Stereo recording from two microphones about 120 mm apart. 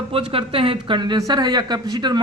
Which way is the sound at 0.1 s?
50° right (ahead or behind).